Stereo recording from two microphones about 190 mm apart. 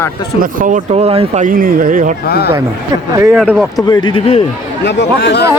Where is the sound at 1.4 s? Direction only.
45° right (ahead or behind).